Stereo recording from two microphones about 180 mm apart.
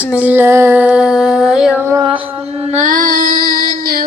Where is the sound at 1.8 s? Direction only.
15° right (ahead or behind).